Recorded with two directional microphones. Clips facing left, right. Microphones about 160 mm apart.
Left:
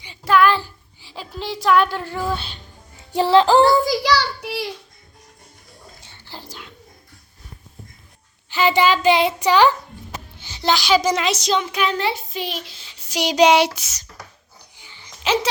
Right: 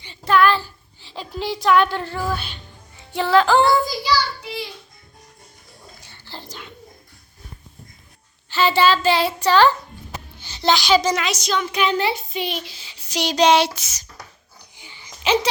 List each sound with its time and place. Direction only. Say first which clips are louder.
0.0 s a child's voice: left 1 dB; 10° left (ahead or behind)
2.1 s speech: left 1 dB; 25° left (ahead or behind)
3.1 s music: left 2 dB; 35° left (ahead or behind)
3.8 s a child's voice: left 3 dB; 75° left (ahead or behind)
6.0 s whispering: even; 20° left (ahead or behind)
6.3 s a child's voice: right 1 dB; 5° left (ahead or behind)
8.4 s a child's voice: even; 15° left (ahead or behind)
11.1 s speech: left 2 dB; 30° left (ahead or behind)
11.7 s speech: right 1 dB; centre (ahead or behind)
13.1 s a child's voice: left 2 dB; 10° left (ahead or behind)
14.8 s babbling: right 3 dB; 15° right (ahead or behind)